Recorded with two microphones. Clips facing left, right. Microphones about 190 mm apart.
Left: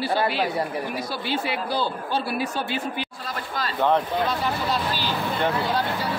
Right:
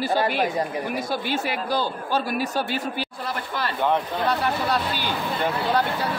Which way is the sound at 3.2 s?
65° right (ahead or behind).